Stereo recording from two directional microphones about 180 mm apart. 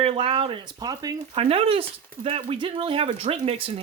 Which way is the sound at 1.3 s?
30° right (ahead or behind).